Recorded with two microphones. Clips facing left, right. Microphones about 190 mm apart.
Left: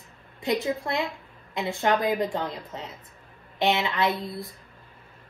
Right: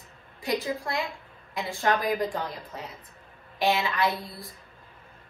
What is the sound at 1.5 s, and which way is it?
A woman's voice, 20° left (ahead or behind).